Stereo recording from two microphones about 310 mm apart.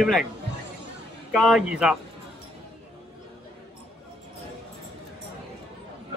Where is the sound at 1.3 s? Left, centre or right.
Centre.